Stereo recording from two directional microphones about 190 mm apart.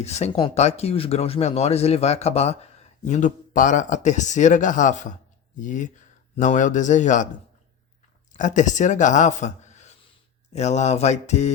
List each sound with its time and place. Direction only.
0.0 s speech: 35° left (ahead or behind)
8.4 s speech: 40° left (ahead or behind)